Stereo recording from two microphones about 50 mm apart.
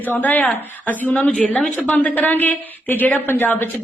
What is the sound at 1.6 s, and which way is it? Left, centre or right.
Speech, left.